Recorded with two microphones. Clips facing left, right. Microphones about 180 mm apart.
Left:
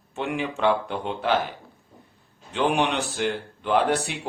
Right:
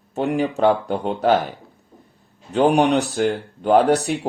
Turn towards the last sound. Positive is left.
turn(degrees=-40)  # may be behind; listen again after turning